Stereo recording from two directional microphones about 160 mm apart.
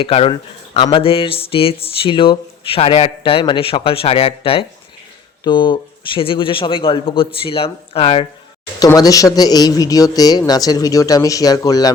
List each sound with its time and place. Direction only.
0.0 s speech: 35° left (ahead or behind)
8.8 s speech: 20° left (ahead or behind)